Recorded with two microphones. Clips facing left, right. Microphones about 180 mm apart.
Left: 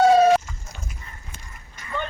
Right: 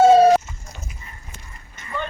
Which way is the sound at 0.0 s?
35° right (ahead or behind).